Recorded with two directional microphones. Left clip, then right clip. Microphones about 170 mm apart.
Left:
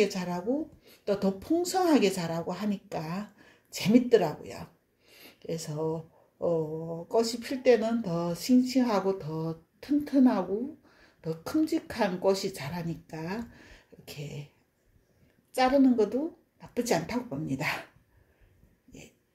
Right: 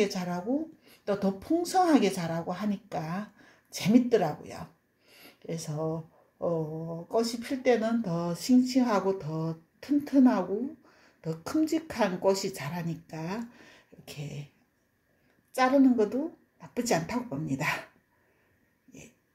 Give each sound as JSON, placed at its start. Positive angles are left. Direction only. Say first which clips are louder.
{"t": 0.0, "sound": "a woman's voice", "louder": "left 1 dB", "side_deg": -10}
{"t": 15.5, "sound": "a woman's voice", "louder": "even", "side_deg": -5}